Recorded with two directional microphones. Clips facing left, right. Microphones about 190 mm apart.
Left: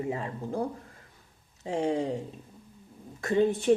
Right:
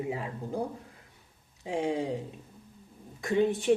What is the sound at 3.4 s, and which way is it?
Speech, 15° right (ahead or behind).